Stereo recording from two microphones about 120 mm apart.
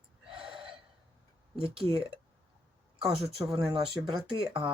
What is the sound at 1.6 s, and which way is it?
Speech, 45° right (ahead or behind).